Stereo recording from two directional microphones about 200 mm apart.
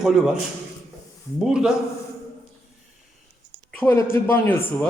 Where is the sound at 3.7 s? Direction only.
10° left (ahead or behind).